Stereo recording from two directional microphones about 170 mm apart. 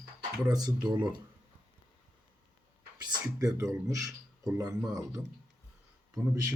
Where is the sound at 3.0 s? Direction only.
20° right (ahead or behind).